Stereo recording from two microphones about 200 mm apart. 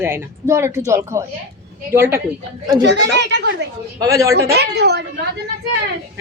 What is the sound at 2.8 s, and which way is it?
Speech, 60° right (ahead or behind).